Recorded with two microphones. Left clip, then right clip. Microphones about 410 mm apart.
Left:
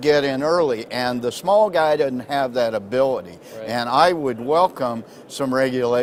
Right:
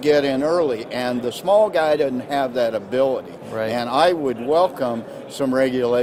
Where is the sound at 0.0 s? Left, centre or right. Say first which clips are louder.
Even; left.